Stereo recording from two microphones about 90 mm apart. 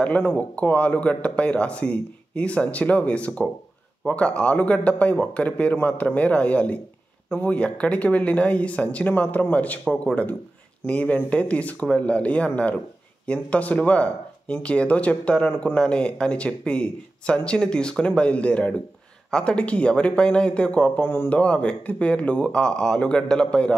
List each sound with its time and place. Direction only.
0.0 s speech: 15° left (ahead or behind)
21.4 s speech: 10° left (ahead or behind)